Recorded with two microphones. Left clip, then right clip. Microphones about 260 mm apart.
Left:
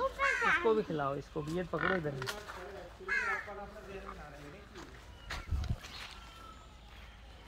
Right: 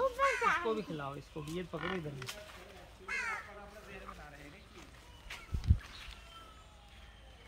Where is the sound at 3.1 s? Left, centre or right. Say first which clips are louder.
Left 4 dB; right.